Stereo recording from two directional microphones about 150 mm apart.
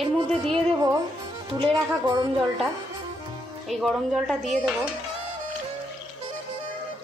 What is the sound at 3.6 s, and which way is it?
Speech, centre (ahead or behind).